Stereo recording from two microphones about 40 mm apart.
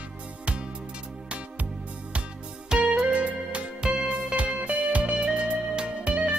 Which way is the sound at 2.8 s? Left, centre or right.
Right.